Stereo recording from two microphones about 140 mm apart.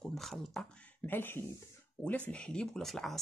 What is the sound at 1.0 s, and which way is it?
Speech, 15° left (ahead or behind).